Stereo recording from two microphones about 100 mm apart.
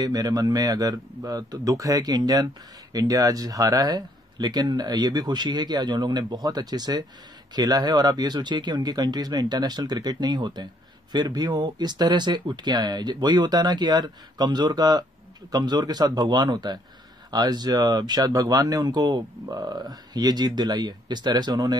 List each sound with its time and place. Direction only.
0.0 s speech: 40° right (ahead or behind)